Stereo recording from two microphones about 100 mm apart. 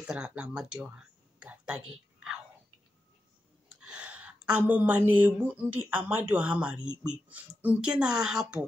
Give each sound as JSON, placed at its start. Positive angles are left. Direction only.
{"t": 0.0, "sound": "a woman's voice", "side_deg": -10}
{"t": 0.9, "sound": "a sound", "side_deg": -10}
{"t": 3.8, "sound": "a woman's voice", "side_deg": -10}